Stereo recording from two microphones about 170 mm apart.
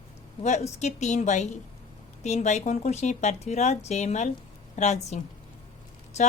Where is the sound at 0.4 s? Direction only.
40° left (ahead or behind).